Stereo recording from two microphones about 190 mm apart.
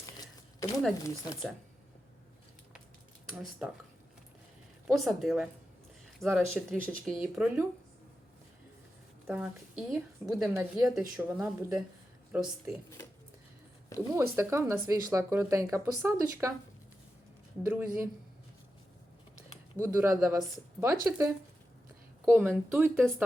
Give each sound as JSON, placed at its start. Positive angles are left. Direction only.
{"t": 0.0, "sound": "a sound", "side_deg": 20}
{"t": 1.0, "sound": "speech", "side_deg": 15}
{"t": 3.2, "sound": "speech", "side_deg": -5}
{"t": 4.9, "sound": "a woman's voice", "side_deg": 0}
{"t": 9.2, "sound": "a woman's voice", "side_deg": -5}
{"t": 14.1, "sound": "speech", "side_deg": -15}
{"t": 17.7, "sound": "speech", "side_deg": -10}
{"t": 19.8, "sound": "speech", "side_deg": -10}
{"t": 22.3, "sound": "speech", "side_deg": -10}